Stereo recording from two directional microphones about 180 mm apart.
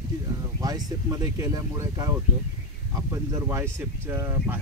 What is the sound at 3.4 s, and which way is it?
Speech, 15° right (ahead or behind).